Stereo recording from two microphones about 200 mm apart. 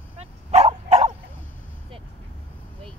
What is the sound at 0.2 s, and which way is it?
Dog, 35° right (ahead or behind).